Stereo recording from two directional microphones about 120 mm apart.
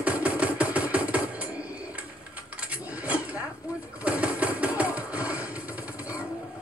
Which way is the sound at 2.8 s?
10° right (ahead or behind).